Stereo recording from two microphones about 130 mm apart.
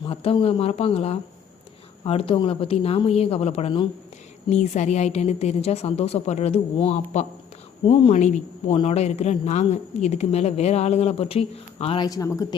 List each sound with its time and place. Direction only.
0.0 s speech: 45° left (ahead or behind)
4.4 s a woman's voice: 65° left (ahead or behind)
8.6 s a woman's voice: 45° left (ahead or behind)
11.9 s speech: 30° left (ahead or behind)